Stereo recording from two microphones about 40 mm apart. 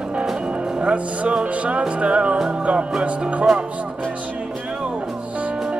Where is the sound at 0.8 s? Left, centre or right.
Right.